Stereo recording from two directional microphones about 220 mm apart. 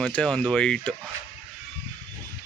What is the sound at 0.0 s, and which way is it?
Speech, 5° left (ahead or behind).